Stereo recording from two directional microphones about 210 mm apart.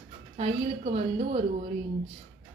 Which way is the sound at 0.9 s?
30° right (ahead or behind).